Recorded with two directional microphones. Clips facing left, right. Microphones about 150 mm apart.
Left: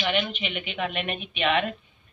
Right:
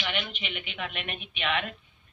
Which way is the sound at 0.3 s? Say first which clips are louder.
Left 6 dB; 65° left (ahead or behind).